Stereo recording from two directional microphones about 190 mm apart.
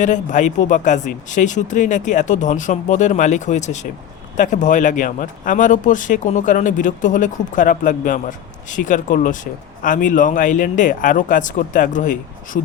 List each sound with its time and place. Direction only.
0.0 s speech: 40° left (ahead or behind)